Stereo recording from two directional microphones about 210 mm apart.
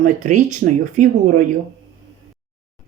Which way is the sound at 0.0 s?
35° right (ahead or behind).